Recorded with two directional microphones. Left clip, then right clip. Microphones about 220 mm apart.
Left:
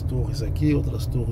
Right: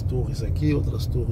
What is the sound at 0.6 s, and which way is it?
Speech, 15° left (ahead or behind).